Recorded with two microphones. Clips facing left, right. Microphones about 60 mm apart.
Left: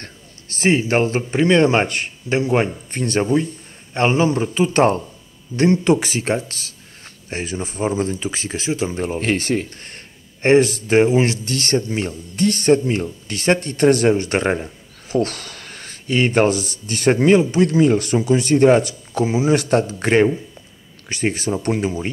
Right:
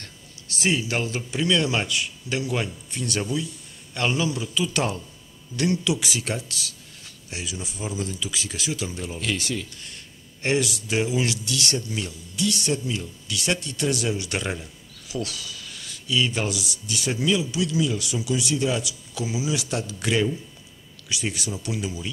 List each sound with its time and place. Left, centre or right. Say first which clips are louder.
0.0 s speech: left 5 dB; left